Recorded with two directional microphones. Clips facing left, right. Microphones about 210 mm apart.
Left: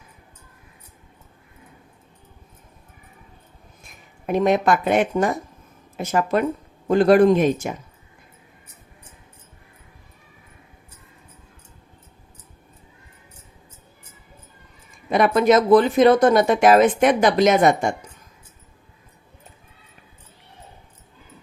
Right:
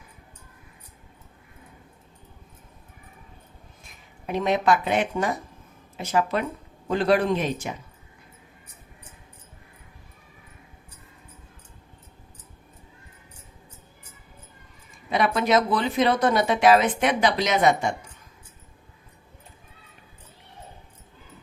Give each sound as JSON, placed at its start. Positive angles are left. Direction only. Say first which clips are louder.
{"t": 4.3, "sound": "speech", "louder": "left 4 dB", "side_deg": 50}
{"t": 15.1, "sound": "speech", "louder": "left 6 dB", "side_deg": 50}